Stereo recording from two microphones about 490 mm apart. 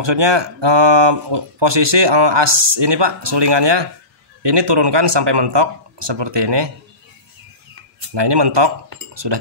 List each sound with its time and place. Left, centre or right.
0.0 s speech: right
8.1 s speech: right